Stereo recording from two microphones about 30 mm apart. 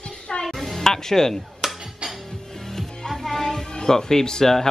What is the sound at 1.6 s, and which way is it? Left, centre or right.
Music, centre.